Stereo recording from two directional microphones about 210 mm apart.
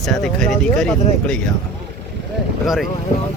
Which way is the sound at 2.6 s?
Centre (ahead or behind).